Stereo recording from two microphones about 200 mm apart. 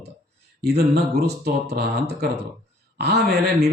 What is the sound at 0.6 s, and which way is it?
Speech, 55° right (ahead or behind).